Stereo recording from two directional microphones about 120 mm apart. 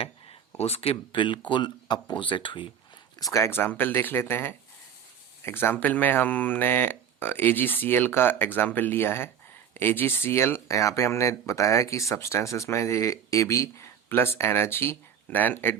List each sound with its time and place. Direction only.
0.6 s speech: 55° left (ahead or behind)
3.3 s speech: 20° left (ahead or behind)